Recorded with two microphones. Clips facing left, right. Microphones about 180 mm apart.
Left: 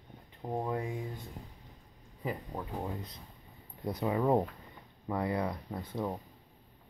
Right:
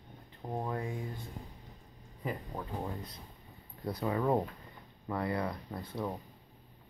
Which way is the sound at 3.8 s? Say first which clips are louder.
Left 2 dB; 20° left (ahead or behind).